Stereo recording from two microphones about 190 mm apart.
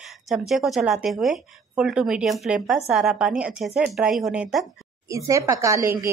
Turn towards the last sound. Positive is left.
turn(degrees=-15)  # may be behind; listen again after turning